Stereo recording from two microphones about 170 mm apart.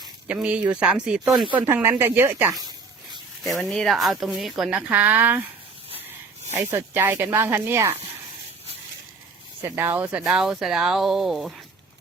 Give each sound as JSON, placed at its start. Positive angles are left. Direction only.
{"t": 0.3, "sound": "speech", "side_deg": -5}
{"t": 2.6, "sound": "a sound", "side_deg": -25}
{"t": 3.4, "sound": "speech", "side_deg": 0}
{"t": 6.5, "sound": "speech", "side_deg": -15}
{"t": 9.6, "sound": "speech", "side_deg": -15}